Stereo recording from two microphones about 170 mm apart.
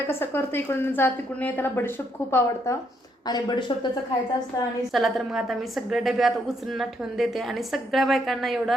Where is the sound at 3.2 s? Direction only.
25° left (ahead or behind).